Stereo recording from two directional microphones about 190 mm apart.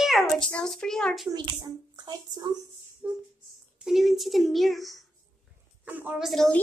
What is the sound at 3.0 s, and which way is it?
A woman's voice, 5° right (ahead or behind).